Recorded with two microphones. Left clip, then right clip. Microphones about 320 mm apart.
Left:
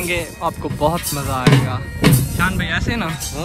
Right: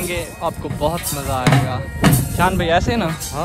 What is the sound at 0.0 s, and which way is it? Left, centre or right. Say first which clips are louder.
Speech: left 2 dB; centre.